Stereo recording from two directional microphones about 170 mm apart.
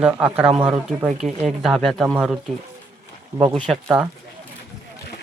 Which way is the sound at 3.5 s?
5° left (ahead or behind).